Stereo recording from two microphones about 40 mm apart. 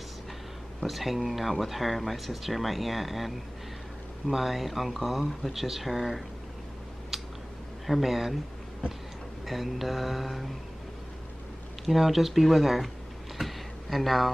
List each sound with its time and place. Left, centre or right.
0.8 s speech: centre
7.1 s a sound: centre
7.8 s speech: centre
9.5 s speech: centre
11.8 s speech: centre
13.4 s a sound: centre